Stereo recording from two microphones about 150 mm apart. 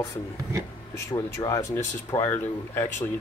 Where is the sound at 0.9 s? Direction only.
20° left (ahead or behind).